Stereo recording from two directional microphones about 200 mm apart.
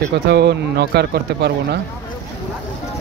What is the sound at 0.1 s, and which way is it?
Speech, 55° right (ahead or behind).